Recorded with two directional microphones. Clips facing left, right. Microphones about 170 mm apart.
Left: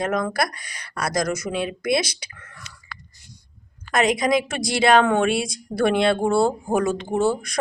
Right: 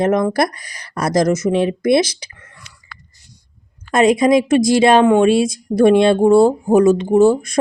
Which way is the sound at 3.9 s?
25° right (ahead or behind).